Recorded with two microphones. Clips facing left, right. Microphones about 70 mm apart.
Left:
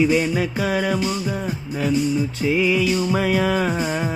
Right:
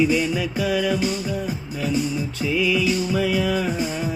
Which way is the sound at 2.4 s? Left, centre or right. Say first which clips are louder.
Left 1 dB; left.